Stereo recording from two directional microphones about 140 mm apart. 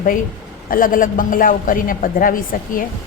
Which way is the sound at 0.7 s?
80° left.